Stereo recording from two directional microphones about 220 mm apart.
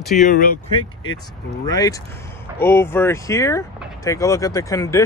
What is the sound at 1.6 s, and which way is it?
Speech, 15° left (ahead or behind).